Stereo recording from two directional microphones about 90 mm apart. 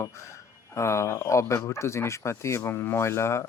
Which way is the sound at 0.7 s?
30° left (ahead or behind).